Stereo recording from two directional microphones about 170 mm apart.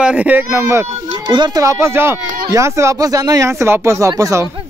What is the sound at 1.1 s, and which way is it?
Speech, 25° right (ahead or behind).